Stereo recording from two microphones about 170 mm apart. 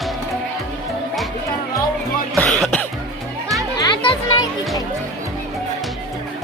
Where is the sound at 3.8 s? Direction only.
25° left (ahead or behind).